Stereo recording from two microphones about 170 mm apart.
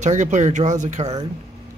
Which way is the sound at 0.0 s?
45° right (ahead or behind).